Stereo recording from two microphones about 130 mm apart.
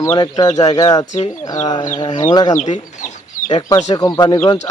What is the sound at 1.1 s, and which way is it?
Speech, 65° left (ahead or behind).